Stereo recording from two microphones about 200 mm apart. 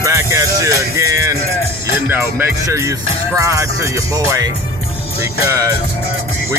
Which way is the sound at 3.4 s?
15° right (ahead or behind).